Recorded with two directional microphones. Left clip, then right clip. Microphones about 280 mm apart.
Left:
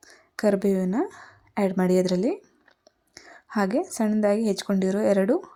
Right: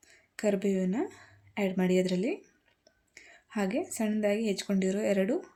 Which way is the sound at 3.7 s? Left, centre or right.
Centre.